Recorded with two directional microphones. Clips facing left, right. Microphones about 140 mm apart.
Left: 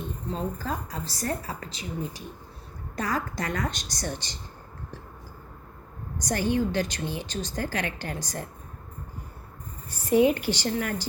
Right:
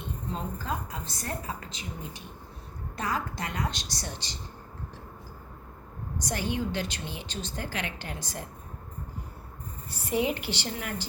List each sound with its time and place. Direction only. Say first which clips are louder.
0.6 s a woman's voice: left 2 dB; 35° left (ahead or behind)
6.2 s a woman's voice: left 6 dB; 45° left (ahead or behind)
9.9 s a woman's voice: left 7 dB; 45° left (ahead or behind)